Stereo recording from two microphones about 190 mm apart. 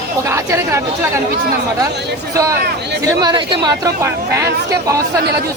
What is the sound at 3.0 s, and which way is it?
Speech, 20° right (ahead or behind).